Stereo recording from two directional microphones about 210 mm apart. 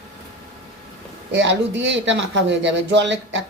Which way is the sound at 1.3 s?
60° right (ahead or behind).